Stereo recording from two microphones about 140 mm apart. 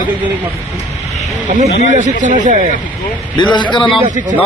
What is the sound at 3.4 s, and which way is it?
Speech, 35° left (ahead or behind).